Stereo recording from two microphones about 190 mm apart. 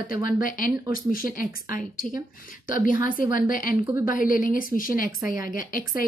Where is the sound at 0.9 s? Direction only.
45° left (ahead or behind).